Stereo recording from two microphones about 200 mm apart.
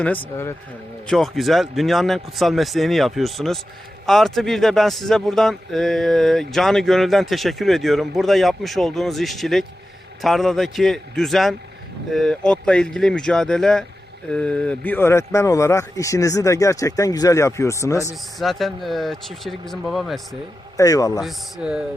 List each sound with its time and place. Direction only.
1.0 s a man's voice: centre (ahead or behind)
18.3 s a man's voice: centre (ahead or behind)
20.7 s speech: 15° left (ahead or behind)
21.2 s a man's voice: centre (ahead or behind)